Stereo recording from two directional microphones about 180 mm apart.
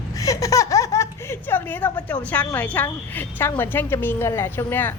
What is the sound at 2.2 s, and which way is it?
A woman's voice, 10° left (ahead or behind).